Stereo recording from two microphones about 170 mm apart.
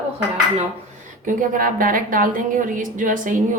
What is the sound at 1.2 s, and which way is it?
A woman's voice, 50° right (ahead or behind).